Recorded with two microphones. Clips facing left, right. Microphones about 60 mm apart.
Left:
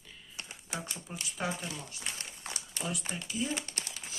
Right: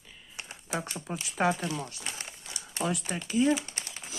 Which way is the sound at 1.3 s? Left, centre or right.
Right.